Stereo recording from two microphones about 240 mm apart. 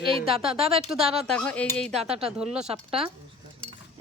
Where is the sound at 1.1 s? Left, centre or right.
Centre.